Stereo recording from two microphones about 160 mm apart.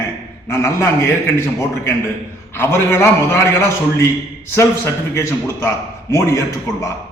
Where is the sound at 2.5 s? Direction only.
15° left (ahead or behind).